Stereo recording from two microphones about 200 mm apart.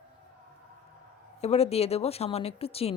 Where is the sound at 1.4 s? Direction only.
30° left (ahead or behind).